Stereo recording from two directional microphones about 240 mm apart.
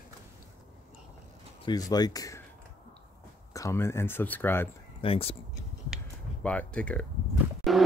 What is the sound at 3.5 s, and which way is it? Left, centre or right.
Speech, centre.